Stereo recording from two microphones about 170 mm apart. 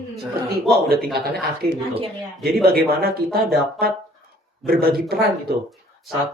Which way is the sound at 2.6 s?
65° right (ahead or behind).